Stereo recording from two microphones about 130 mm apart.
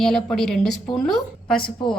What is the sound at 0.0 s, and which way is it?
A woman's voice, 5° left (ahead or behind).